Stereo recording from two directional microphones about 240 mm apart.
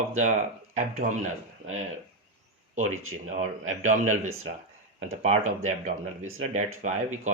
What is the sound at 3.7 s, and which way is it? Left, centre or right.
Speech, right.